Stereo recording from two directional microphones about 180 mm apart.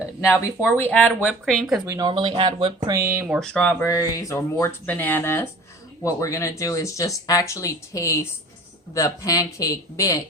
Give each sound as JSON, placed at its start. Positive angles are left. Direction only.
{"t": 0.2, "sound": "speech", "side_deg": 15}
{"t": 1.8, "sound": "speech", "side_deg": -20}
{"t": 3.4, "sound": "speech", "side_deg": 5}